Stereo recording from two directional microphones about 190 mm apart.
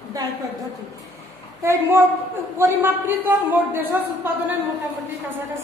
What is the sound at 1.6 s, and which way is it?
Speech, 15° right (ahead or behind).